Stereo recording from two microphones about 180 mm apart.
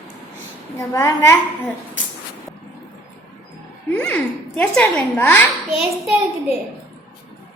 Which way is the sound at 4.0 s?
10° left (ahead or behind).